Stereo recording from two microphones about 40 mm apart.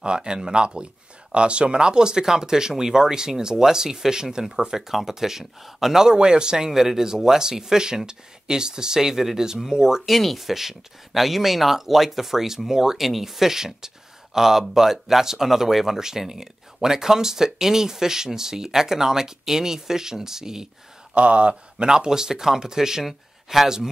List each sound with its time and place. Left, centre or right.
0.0 s speech: right
6.1 s speech: right
10.0 s speech: centre
21.1 s speech: right; by 23.0 s centre
23.0 s speech: centre